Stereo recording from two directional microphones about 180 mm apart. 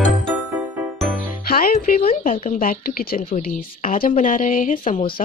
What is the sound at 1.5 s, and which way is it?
Music, 55° left (ahead or behind).